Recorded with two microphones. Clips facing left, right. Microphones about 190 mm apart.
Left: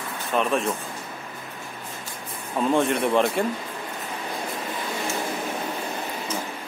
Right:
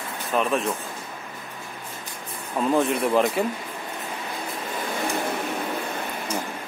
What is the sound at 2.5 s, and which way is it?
Speech, centre (ahead or behind).